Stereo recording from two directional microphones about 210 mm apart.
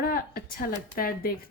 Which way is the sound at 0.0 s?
45° left (ahead or behind).